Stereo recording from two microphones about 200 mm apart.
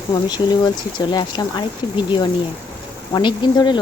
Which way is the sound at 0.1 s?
20° left (ahead or behind).